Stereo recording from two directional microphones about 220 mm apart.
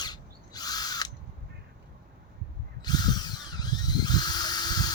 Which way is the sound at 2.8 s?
20° left (ahead or behind).